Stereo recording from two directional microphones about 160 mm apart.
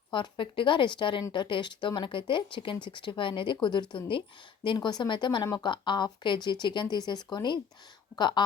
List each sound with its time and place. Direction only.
0.1 s a woman's voice: 30° left (ahead or behind)